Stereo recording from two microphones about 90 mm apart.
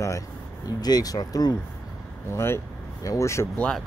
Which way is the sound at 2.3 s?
30° left (ahead or behind).